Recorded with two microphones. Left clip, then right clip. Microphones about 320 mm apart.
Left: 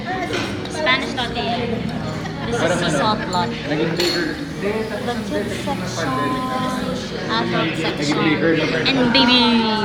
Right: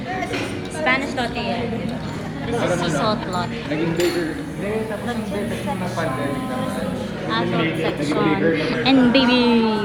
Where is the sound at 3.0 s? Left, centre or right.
Centre.